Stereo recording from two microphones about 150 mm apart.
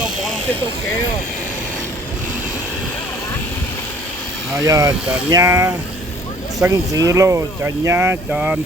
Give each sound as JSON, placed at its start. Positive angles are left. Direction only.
{"t": 4.6, "sound": "speech", "side_deg": -25}